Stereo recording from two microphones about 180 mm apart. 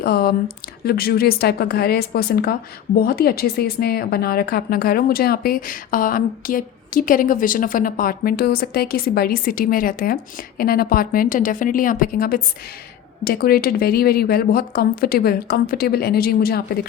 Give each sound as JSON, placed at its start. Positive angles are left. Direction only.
{"t": 0.0, "sound": "a woman's voice", "side_deg": 60}